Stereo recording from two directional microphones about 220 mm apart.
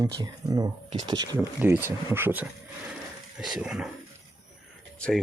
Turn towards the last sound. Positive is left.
turn(degrees=5)  # may be behind; listen again after turning